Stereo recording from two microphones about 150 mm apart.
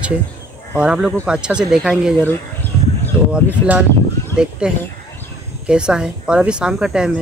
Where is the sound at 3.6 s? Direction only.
15° left (ahead or behind).